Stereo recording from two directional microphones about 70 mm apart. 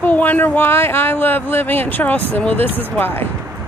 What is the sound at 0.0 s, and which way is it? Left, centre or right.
Speech, left.